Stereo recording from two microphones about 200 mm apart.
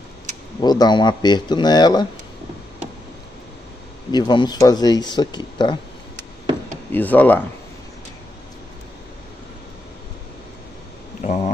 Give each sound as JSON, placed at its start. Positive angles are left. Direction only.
{"t": 0.6, "sound": "speech", "side_deg": 20}
{"t": 4.1, "sound": "speech", "side_deg": 20}
{"t": 6.9, "sound": "speech", "side_deg": 10}
{"t": 11.2, "sound": "a sound", "side_deg": 35}